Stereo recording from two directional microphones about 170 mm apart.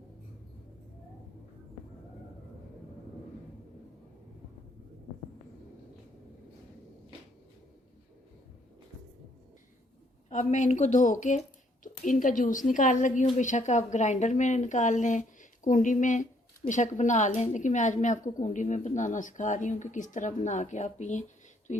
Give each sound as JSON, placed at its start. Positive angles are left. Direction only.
{"t": 10.2, "sound": "a woman's voice", "side_deg": 45}